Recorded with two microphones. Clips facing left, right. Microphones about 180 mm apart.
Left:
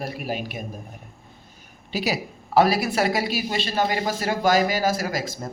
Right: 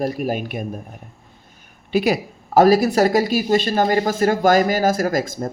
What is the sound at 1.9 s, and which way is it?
Speech, 55° right (ahead or behind).